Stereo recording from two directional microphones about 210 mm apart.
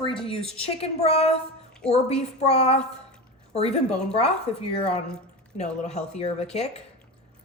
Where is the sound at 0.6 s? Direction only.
25° left (ahead or behind).